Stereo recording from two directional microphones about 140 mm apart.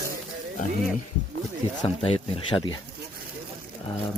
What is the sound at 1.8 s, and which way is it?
Speech, 40° left (ahead or behind).